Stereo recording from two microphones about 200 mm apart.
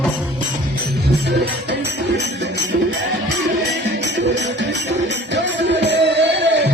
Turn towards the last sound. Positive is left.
turn(degrees=-60)  # may be behind; listen again after turning